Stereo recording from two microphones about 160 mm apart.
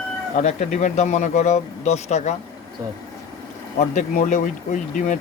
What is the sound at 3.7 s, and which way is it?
Speech, 50° left (ahead or behind).